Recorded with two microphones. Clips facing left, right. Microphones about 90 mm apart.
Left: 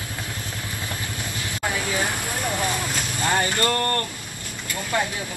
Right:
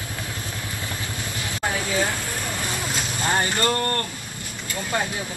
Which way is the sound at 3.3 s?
20° right (ahead or behind).